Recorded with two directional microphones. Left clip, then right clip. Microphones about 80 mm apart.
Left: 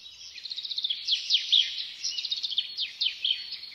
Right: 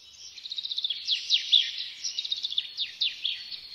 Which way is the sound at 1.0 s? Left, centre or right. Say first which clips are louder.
Even; centre.